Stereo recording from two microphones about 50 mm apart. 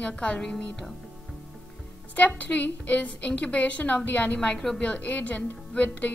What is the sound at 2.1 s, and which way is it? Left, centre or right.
A woman's voice, left.